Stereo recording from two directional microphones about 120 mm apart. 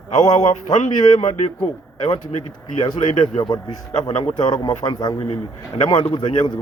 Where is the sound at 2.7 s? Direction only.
50° left (ahead or behind); by 5.1 s 35° left (ahead or behind).